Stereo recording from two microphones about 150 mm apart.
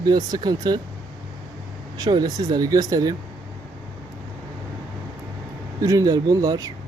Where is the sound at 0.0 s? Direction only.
25° right (ahead or behind).